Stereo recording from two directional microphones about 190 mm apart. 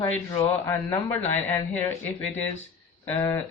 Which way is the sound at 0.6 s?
5° left (ahead or behind).